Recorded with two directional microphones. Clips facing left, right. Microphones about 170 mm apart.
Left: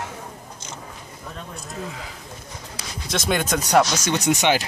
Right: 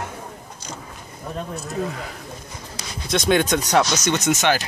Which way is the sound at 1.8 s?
50° right (ahead or behind).